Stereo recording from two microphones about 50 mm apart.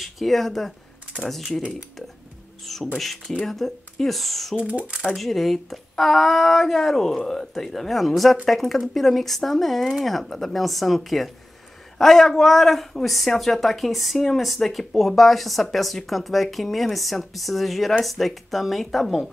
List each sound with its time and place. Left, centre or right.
0.0 s speech: centre
2.6 s beatboxing: centre
3.0 s speech: centre
4.6 s speech: right
5.1 s speech: centre